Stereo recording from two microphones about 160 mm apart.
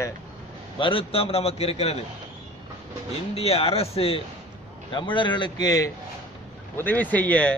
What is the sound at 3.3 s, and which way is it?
A man's voice, 40° left (ahead or behind).